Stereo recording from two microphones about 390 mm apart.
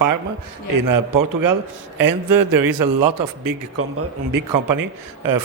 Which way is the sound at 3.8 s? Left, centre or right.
Right.